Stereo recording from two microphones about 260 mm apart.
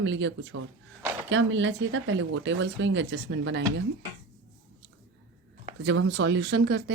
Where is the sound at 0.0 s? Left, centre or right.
Right.